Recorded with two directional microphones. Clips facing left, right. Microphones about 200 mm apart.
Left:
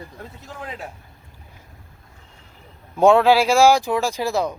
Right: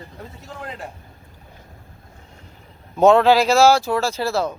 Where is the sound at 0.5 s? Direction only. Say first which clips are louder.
Even; 5° left (ahead or behind).